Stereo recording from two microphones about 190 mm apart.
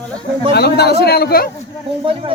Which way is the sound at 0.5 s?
60° left (ahead or behind).